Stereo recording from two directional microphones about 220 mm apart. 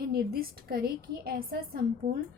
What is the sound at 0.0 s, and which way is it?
A woman's voice, 45° right (ahead or behind).